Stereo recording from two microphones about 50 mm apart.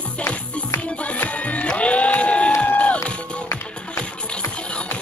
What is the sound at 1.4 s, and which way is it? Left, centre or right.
Music, left.